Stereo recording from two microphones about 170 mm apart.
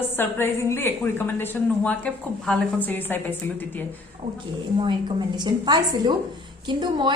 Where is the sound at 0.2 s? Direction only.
15° left (ahead or behind).